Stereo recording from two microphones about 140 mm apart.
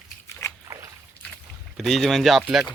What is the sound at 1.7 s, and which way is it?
Speech, centre (ahead or behind).